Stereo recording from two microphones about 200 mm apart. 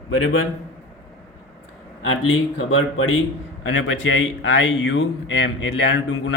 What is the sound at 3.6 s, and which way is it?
Speech, 70° left (ahead or behind).